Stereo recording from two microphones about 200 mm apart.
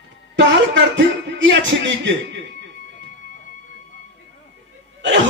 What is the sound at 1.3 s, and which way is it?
Speech, 65° right (ahead or behind).